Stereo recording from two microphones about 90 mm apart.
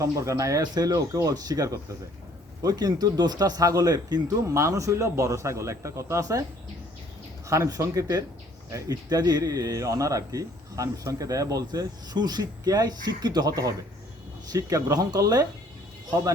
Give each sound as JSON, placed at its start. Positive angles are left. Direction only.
{"t": 0.0, "sound": "a man's voice", "side_deg": -35}
{"t": 0.6, "sound": "speech", "side_deg": -50}
{"t": 4.4, "sound": "a man's voice", "side_deg": -35}
{"t": 7.4, "sound": "a man's voice", "side_deg": -35}